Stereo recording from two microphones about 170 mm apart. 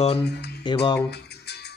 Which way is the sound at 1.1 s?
75° left (ahead or behind).